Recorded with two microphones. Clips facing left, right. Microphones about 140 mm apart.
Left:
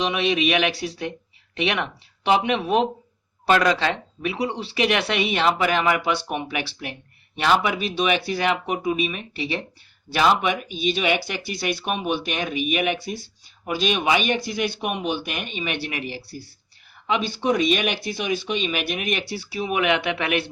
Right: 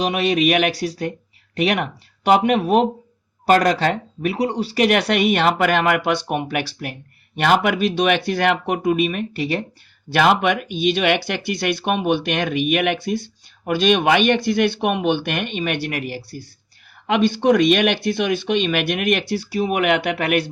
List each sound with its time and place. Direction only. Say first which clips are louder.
0.0 s speech: right 4 dB; 40° right (ahead or behind)
10.1 s speech: right 3 dB; 55° right (ahead or behind)
19.3 s speech: right 5 dB; 45° right (ahead or behind)